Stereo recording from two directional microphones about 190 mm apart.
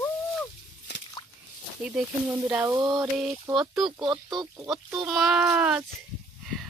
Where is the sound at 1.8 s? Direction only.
5° right (ahead or behind).